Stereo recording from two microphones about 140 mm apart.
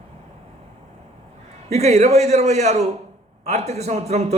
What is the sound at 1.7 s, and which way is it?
A man's voice, 50° right (ahead or behind).